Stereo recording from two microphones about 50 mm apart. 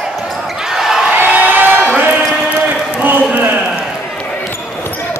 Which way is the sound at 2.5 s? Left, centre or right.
Right.